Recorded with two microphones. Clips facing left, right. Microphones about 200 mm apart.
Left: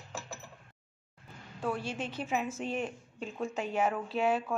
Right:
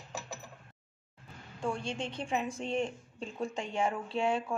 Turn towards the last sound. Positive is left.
turn(degrees=5)  # may be behind; listen again after turning